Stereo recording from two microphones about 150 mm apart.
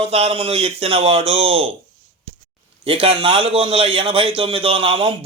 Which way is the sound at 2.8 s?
40° right (ahead or behind).